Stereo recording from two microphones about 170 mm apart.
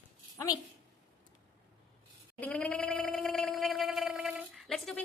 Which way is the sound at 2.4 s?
10° left (ahead or behind).